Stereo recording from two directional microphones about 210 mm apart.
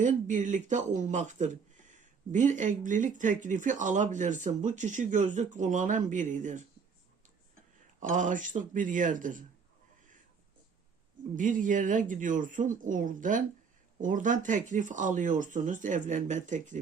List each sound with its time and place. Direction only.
0.0 s speech: 35° right (ahead or behind)
8.0 s speech: 40° right (ahead or behind)
11.3 s speech: 40° right (ahead or behind)